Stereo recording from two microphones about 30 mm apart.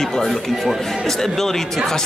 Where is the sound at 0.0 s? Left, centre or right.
Centre.